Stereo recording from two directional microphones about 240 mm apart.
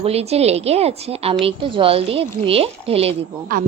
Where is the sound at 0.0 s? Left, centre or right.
Right.